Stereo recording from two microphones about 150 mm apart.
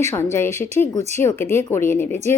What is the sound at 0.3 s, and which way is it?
A woman's voice, 15° left (ahead or behind).